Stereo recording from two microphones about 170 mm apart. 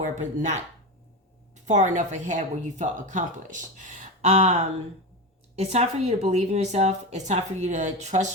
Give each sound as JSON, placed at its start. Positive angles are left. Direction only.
{"t": 0.2, "sound": "a woman's voice", "side_deg": -45}
{"t": 1.6, "sound": "a woman's voice", "side_deg": -45}
{"t": 5.5, "sound": "a woman's voice", "side_deg": -40}